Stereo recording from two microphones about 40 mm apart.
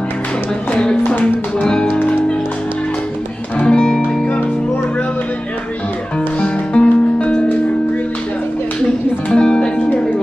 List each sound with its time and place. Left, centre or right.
1.0 s music: left
1.9 s music: left
3.5 s music: left
6.4 s music: left
9.3 s music: left